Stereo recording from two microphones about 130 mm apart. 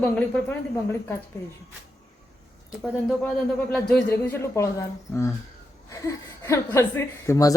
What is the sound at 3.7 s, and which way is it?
A man's voice, 10° left (ahead or behind).